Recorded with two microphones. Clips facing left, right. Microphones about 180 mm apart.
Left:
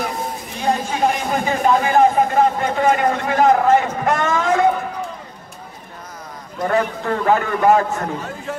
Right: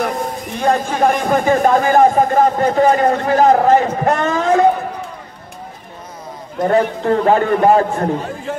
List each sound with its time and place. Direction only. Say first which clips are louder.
0.6 s speech: right 4 dB; 55° right (ahead or behind); by 4.6 s 35° right (ahead or behind)
6.7 s speech: right 5 dB; 30° right (ahead or behind)